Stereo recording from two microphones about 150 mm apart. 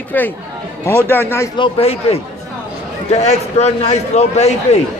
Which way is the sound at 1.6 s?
40° left (ahead or behind).